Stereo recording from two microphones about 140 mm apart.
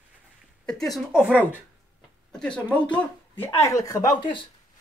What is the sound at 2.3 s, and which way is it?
Speech, 5° left (ahead or behind).